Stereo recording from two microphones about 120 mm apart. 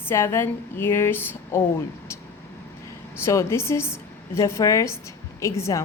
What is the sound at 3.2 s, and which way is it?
A woman's voice, 25° left (ahead or behind).